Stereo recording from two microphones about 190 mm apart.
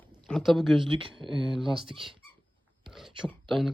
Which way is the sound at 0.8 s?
25° right (ahead or behind).